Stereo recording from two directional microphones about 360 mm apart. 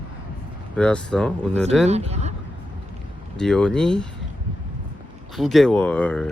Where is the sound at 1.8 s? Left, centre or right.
Centre.